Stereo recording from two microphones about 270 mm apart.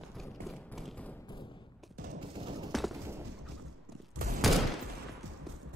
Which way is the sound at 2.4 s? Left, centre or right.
Centre.